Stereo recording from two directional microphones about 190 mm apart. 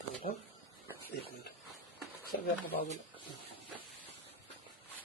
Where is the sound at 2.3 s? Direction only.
55° left (ahead or behind).